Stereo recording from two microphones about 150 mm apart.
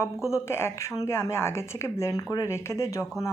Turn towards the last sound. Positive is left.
turn(degrees=20)  # may be behind; listen again after turning